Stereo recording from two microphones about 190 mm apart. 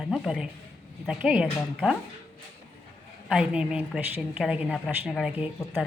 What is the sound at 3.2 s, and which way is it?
A woman's voice, 5° right (ahead or behind).